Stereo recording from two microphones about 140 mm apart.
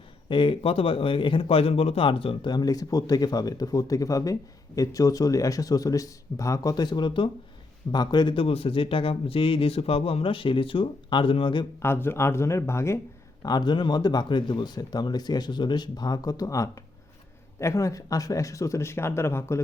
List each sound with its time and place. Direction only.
0.3 s a man's voice: 35° left (ahead or behind)
11.8 s speech: 15° left (ahead or behind)
13.4 s speech: 30° left (ahead or behind)